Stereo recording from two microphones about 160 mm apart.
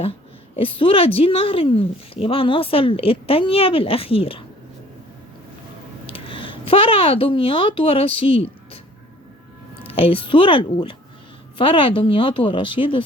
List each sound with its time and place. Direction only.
0.0 s a woman's voice: 35° left (ahead or behind)
6.1 s speech: 35° left (ahead or behind)
9.8 s a woman's voice: 35° left (ahead or behind)